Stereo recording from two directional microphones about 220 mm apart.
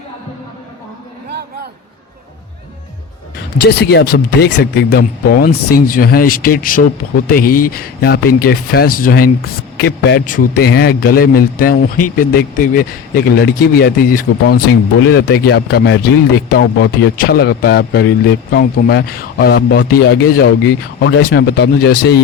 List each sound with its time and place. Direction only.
3.6 s a man's voice: 50° left (ahead or behind)